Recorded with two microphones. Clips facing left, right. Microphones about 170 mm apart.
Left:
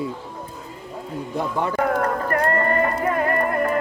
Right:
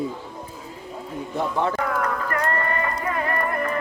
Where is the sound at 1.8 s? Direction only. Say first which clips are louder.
Left 4 dB; 45° left (ahead or behind).